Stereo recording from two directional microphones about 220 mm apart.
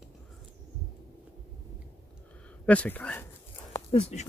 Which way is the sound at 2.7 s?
5° left (ahead or behind).